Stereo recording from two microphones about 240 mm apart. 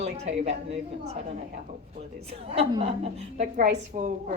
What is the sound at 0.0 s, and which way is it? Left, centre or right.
Speech, right.